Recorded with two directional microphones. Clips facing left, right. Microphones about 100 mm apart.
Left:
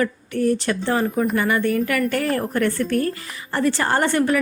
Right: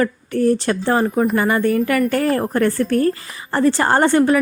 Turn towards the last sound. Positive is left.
turn(degrees=-30)  # may be behind; listen again after turning